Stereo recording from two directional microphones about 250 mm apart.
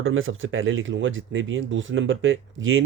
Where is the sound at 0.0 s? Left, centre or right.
Right.